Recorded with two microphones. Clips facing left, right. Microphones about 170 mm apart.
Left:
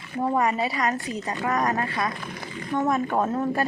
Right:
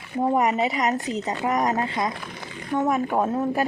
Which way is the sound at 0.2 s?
20° right (ahead or behind).